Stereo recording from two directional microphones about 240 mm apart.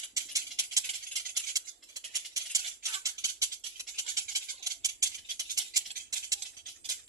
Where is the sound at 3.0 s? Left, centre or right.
Centre.